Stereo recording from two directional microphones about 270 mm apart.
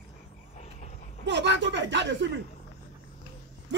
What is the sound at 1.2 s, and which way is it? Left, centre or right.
Speech, right.